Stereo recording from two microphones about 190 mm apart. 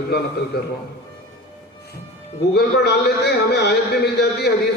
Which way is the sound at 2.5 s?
60° left (ahead or behind).